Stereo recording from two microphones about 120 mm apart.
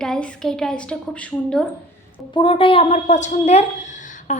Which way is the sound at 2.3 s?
45° left (ahead or behind).